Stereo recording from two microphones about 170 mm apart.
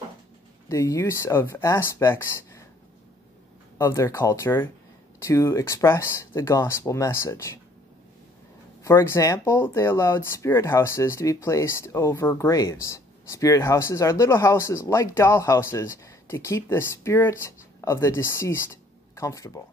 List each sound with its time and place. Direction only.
0.7 s speech: 20° left (ahead or behind)
3.7 s speech: 15° left (ahead or behind)
8.8 s speech: 15° left (ahead or behind)